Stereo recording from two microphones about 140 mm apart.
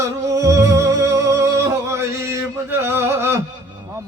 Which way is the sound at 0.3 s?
25° right (ahead or behind).